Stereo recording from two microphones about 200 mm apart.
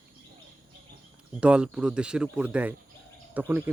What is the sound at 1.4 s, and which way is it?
Speech, 5° right (ahead or behind).